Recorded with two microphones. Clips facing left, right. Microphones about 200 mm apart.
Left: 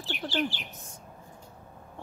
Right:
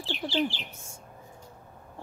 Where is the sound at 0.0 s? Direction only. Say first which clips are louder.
Right 2 dB; 25° right (ahead or behind).